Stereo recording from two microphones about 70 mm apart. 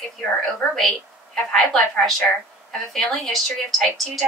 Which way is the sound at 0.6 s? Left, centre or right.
Centre.